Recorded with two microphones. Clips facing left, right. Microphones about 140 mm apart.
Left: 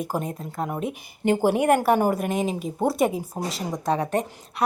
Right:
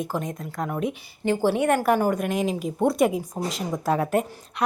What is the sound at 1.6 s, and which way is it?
A woman's voice, 5° left (ahead or behind).